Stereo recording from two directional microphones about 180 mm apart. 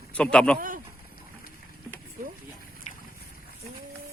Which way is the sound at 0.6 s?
50° right (ahead or behind).